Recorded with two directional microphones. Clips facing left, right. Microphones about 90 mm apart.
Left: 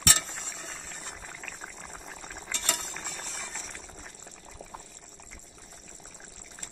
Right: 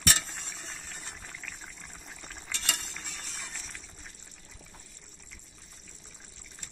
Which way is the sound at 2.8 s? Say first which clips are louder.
Left 4 dB; 40° left (ahead or behind).